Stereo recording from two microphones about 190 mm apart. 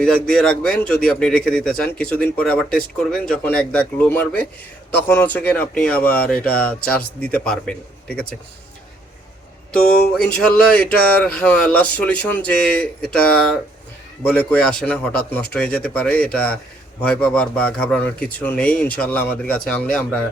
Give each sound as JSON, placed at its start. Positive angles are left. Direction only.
{"t": 0.0, "sound": "a man's voice", "side_deg": 5}
{"t": 9.7, "sound": "speech", "side_deg": 50}
{"t": 10.2, "sound": "a man's voice", "side_deg": 5}